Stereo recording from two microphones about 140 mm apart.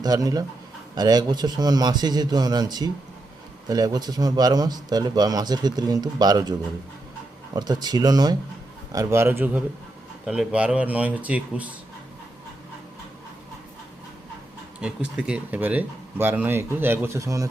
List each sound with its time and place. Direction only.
0.0 s speech: 25° right (ahead or behind)
7.5 s speech: 30° right (ahead or behind); by 11.7 s 10° right (ahead or behind)
14.8 s speech: 5° right (ahead or behind); by 17.5 s 25° right (ahead or behind)